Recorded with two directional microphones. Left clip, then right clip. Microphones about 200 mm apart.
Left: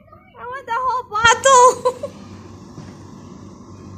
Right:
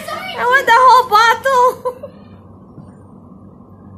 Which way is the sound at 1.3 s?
15° left (ahead or behind).